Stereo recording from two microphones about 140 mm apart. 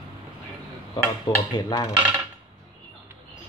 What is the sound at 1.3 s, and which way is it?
Speech, 35° left (ahead or behind).